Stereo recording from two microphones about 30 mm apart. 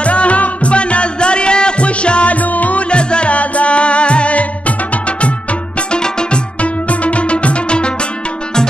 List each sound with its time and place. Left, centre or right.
0.0 s music: left
2.3 s music: left
2.9 s music: left
5.9 s music: left
6.6 s music: left